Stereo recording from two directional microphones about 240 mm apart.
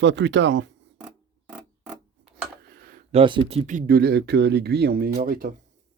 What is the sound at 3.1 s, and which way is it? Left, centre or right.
Speech, right.